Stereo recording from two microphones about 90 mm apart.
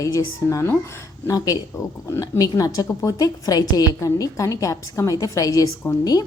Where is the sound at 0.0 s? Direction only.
40° left (ahead or behind).